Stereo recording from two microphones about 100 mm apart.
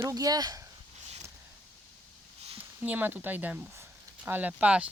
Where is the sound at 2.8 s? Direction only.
20° right (ahead or behind).